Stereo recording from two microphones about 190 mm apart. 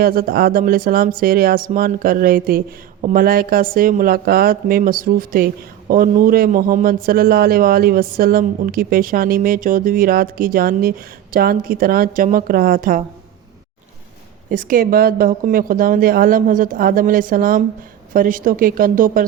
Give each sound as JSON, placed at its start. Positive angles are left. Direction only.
{"t": 0.0, "sound": "a man's voice", "side_deg": -50}
{"t": 14.5, "sound": "a man's voice", "side_deg": -45}